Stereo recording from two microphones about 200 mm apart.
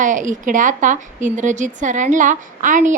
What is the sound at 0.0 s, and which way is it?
A woman's voice, 40° right (ahead or behind).